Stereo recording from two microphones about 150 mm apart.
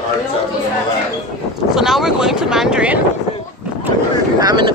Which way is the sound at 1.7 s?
5° right (ahead or behind).